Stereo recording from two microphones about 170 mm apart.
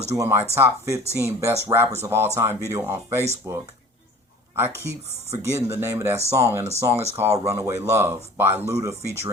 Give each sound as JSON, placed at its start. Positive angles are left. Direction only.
{"t": 0.2, "sound": "speech", "side_deg": -15}